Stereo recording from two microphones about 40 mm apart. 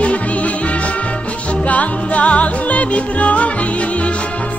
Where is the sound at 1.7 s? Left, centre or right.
Left.